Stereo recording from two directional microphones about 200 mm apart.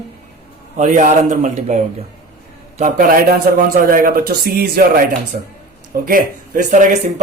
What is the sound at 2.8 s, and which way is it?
A man's voice, 45° right (ahead or behind).